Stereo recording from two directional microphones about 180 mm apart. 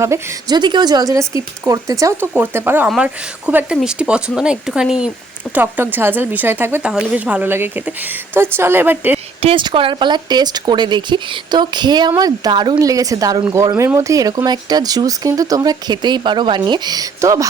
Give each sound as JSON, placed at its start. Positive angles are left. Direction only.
{"t": 0.0, "sound": "a woman's voice", "side_deg": -20}
{"t": 9.4, "sound": "speech", "side_deg": -30}